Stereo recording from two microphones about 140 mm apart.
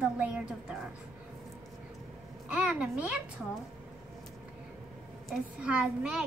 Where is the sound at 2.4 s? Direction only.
10° right (ahead or behind).